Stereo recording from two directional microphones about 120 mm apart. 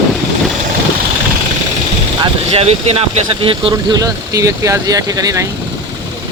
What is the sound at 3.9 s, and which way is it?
Speech, 30° right (ahead or behind).